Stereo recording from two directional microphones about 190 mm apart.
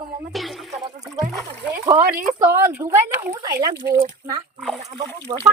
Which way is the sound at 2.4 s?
15° right (ahead or behind).